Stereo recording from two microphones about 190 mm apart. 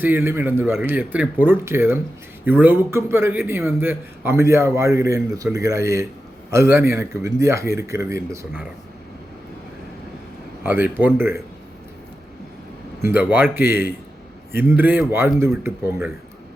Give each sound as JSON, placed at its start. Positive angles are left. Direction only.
{"t": 0.0, "sound": "speech", "side_deg": -10}
{"t": 10.6, "sound": "a man's voice", "side_deg": -10}
{"t": 13.0, "sound": "speech", "side_deg": -10}